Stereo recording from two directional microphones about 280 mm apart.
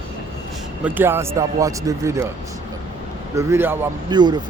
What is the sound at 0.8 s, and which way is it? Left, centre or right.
Speech, centre.